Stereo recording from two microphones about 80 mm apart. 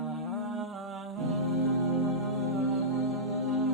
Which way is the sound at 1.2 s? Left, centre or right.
Centre.